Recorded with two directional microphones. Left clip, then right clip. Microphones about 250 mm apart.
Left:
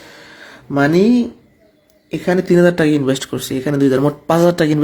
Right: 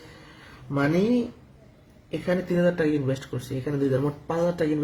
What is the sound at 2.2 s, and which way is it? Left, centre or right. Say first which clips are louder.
Speech: left 11 dB; left.